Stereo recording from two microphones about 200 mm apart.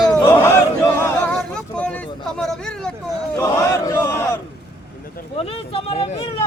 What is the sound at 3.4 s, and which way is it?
Battle cry, 15° left (ahead or behind).